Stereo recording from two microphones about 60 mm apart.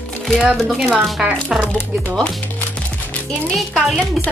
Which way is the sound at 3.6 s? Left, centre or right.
Centre.